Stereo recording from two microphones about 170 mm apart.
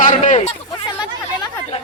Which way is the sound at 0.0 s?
45° left (ahead or behind).